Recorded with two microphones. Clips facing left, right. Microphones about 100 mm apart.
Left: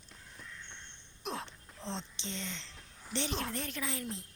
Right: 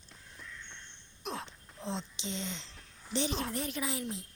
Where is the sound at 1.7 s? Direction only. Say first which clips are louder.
Right 3 dB; 10° right (ahead or behind).